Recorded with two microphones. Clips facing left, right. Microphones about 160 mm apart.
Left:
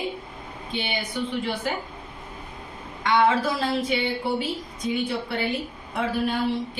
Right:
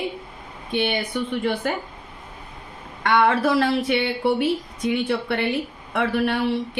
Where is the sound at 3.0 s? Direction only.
60° right (ahead or behind).